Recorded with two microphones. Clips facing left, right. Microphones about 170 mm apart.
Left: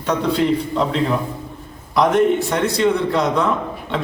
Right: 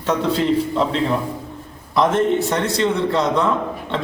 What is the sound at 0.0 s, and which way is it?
Speech, centre (ahead or behind).